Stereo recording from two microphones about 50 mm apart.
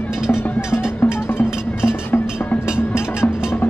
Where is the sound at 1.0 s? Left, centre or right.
Left.